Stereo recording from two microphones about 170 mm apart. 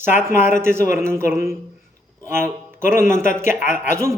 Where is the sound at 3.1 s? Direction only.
50° left (ahead or behind).